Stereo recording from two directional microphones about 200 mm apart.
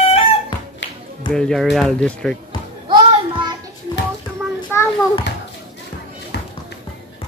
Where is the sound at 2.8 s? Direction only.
25° right (ahead or behind).